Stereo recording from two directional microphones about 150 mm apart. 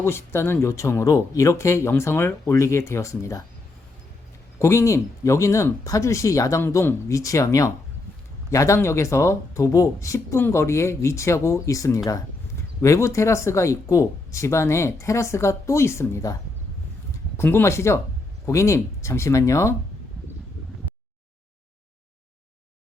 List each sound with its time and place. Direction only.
0.0 s speech: 15° left (ahead or behind)
4.6 s speech: 20° left (ahead or behind)